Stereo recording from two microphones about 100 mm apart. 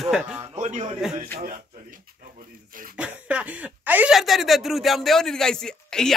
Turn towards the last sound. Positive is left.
turn(degrees=5)  # may be behind; listen again after turning